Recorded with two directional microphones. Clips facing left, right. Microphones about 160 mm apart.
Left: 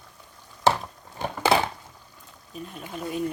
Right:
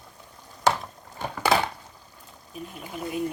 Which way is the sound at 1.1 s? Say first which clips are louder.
Left 1 dB; 25° left (ahead or behind).